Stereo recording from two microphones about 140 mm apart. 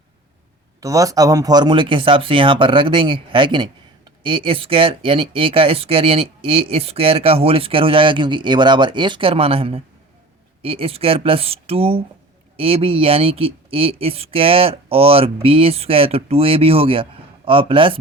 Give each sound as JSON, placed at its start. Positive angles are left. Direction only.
{"t": 0.8, "sound": "speech", "side_deg": -25}